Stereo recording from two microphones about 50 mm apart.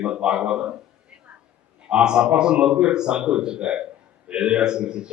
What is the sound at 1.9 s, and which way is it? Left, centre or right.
A man's voice, centre.